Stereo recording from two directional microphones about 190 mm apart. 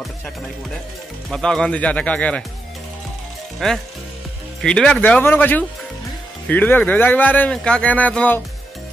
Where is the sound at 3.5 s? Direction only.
Centre (ahead or behind).